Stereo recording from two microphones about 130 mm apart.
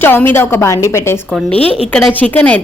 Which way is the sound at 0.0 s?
15° left (ahead or behind).